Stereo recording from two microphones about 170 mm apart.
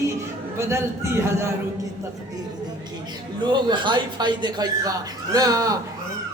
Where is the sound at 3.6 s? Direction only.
25° right (ahead or behind).